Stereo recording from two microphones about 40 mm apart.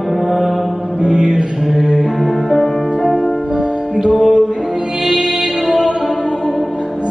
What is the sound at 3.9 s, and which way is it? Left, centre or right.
Music, right.